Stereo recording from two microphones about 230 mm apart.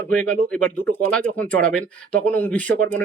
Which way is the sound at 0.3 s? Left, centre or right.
Centre.